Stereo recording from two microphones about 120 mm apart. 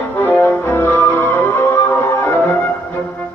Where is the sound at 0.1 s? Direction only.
15° left (ahead or behind).